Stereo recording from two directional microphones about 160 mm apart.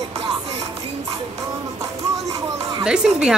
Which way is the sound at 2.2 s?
20° right (ahead or behind).